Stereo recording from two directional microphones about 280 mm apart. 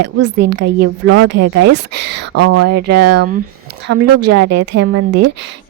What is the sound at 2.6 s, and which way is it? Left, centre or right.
Speech, right.